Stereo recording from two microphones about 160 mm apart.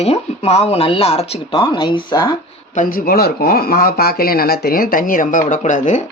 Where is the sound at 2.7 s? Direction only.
55° left (ahead or behind).